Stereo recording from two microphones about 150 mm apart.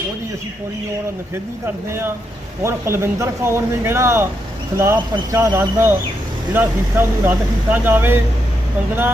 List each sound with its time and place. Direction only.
1.9 s speech: 15° right (ahead or behind)